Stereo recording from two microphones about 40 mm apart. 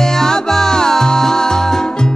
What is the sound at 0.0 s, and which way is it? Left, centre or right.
Music, centre.